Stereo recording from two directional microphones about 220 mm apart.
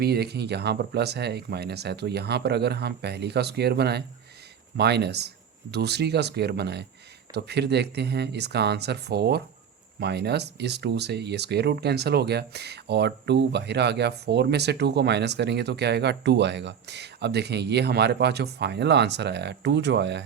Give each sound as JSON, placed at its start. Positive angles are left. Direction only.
{"t": 0.0, "sound": "speech", "side_deg": -45}